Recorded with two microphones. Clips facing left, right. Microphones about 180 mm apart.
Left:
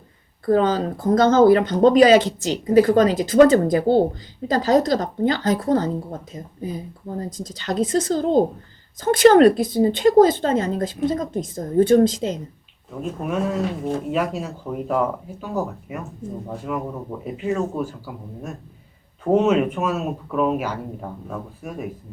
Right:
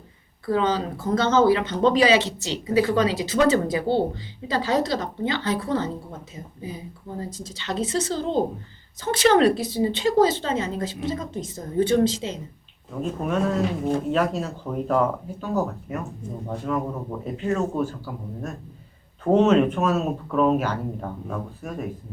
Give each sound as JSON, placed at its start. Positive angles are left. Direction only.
{"t": 0.4, "sound": "speech", "side_deg": 45}
{"t": 12.9, "sound": "speech", "side_deg": 5}